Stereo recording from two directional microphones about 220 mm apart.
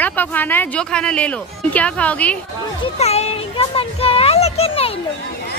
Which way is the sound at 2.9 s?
30° left (ahead or behind).